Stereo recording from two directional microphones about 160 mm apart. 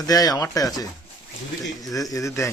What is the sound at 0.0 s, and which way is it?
Speech, 25° left (ahead or behind).